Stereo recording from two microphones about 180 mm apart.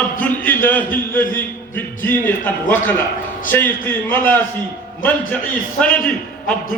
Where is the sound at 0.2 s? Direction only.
10° left (ahead or behind).